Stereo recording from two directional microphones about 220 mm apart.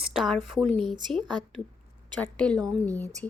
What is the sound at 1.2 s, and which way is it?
Speech, 20° right (ahead or behind).